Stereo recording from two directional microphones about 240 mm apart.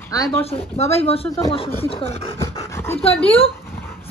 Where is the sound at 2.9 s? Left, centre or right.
Left.